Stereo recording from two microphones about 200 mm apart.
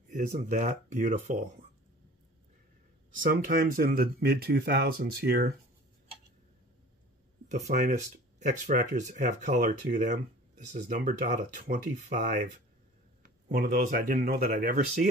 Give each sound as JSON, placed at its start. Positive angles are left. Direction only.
{"t": 0.1, "sound": "speech", "side_deg": -40}
{"t": 3.2, "sound": "speech", "side_deg": -45}
{"t": 7.4, "sound": "speech", "side_deg": -40}